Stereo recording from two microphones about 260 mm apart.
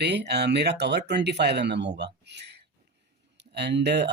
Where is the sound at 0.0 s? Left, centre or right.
Right.